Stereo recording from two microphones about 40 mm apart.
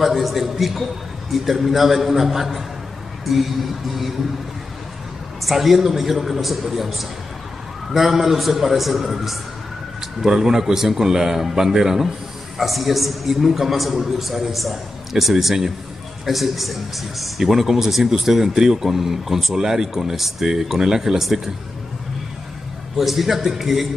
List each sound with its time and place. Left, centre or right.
0.0 s a man's voice: centre
5.4 s a man's voice: centre
22.9 s speech: centre